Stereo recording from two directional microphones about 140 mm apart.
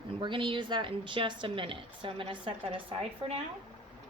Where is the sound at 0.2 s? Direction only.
35° right (ahead or behind).